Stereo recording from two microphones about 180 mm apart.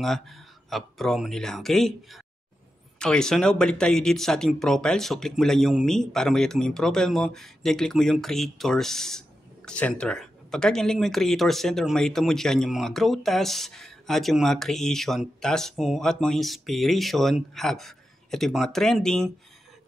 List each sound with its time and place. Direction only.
0.0 s speech: centre (ahead or behind)